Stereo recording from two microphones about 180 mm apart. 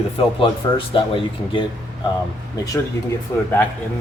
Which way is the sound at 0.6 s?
25° left (ahead or behind).